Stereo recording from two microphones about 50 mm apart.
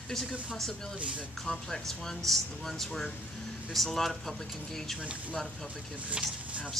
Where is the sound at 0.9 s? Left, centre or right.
Right.